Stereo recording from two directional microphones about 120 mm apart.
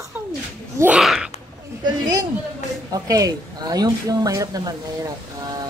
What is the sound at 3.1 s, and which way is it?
Speech, 30° right (ahead or behind).